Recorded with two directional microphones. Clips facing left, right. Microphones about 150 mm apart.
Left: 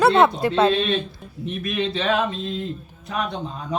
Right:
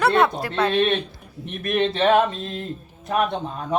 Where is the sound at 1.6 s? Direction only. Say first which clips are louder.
Right 5 dB; 55° right (ahead or behind).